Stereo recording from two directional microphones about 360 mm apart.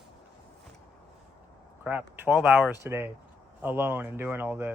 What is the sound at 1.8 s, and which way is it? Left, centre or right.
Speech, centre.